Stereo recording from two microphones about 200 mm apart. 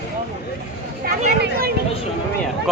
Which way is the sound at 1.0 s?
50° right (ahead or behind).